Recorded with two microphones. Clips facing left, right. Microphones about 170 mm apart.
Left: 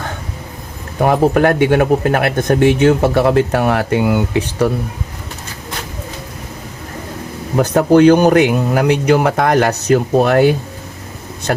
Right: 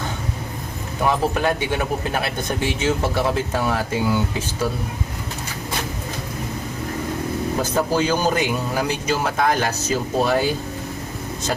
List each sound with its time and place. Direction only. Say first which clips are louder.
0.9 s speech: left 8 dB; 55° left (ahead or behind)
7.5 s speech: left 12 dB; 65° left (ahead or behind)